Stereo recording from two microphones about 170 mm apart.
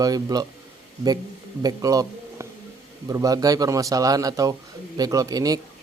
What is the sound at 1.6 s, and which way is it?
A man's voice, 20° right (ahead or behind).